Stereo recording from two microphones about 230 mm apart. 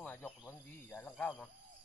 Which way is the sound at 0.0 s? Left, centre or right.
Centre.